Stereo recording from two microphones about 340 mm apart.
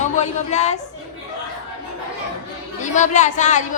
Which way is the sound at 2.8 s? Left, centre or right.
Left.